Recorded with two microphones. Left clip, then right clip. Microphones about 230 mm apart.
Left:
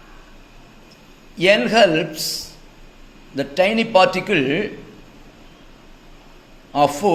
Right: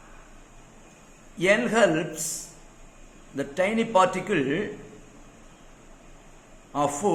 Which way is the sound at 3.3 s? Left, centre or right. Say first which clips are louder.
Left 8 dB; centre.